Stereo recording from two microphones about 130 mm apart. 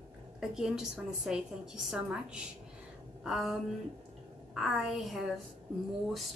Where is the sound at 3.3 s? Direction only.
Centre (ahead or behind).